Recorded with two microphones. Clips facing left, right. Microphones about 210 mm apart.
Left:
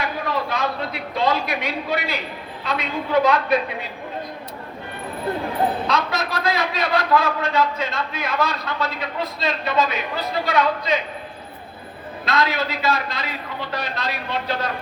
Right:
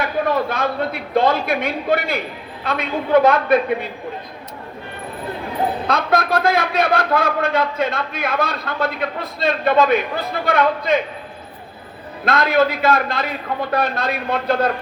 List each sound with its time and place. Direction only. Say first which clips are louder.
0.0 s a man's voice: right 6 dB; 55° right (ahead or behind)
5.9 s a man's voice: right 5 dB; 55° right (ahead or behind)
12.2 s a man's voice: right 6 dB; 55° right (ahead or behind)